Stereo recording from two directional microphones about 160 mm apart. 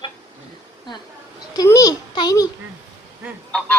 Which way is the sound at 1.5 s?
20° left (ahead or behind).